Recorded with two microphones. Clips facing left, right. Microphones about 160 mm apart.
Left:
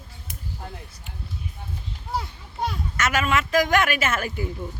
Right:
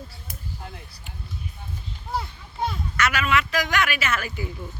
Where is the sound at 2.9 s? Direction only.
45° left (ahead or behind).